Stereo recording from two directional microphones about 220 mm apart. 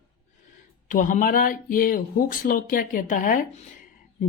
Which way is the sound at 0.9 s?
35° left (ahead or behind).